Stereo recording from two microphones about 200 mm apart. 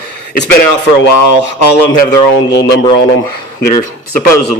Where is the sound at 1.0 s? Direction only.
60° left (ahead or behind).